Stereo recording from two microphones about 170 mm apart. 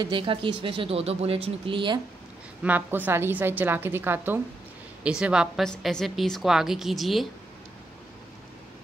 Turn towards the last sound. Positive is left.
turn(degrees=0)  # may be behind; listen again after turning